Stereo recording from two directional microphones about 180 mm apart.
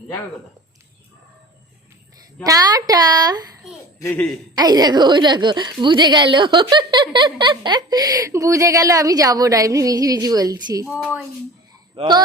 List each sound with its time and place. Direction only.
2.5 s a woman's voice: 20° right (ahead or behind)
4.0 s speech: 10° left (ahead or behind)
4.5 s a woman's voice: 20° right (ahead or behind)
11.9 s a woman's voice: 25° right (ahead or behind)